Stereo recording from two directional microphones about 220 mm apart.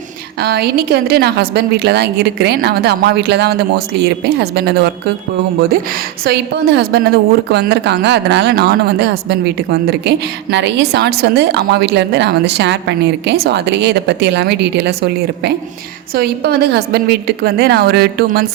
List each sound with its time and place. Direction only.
0.3 s a woman's voice: 45° right (ahead or behind)
6.2 s a woman's voice: 45° right (ahead or behind)